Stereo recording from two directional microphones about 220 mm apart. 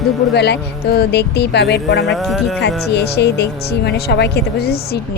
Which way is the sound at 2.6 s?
50° left (ahead or behind).